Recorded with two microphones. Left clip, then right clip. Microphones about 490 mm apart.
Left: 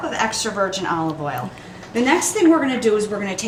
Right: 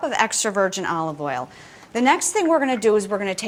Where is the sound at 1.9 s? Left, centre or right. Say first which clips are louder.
Even; right.